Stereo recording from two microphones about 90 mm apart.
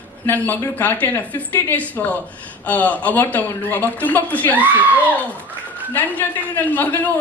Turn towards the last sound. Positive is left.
turn(degrees=20)  # may be behind; listen again after turning